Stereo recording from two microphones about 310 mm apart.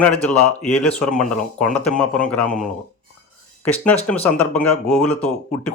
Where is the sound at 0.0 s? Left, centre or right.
Centre.